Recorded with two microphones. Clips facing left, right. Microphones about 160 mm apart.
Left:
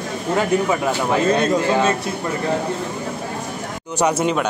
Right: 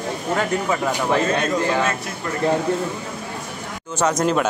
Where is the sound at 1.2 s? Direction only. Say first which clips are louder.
Left 4 dB; 35° left (ahead or behind).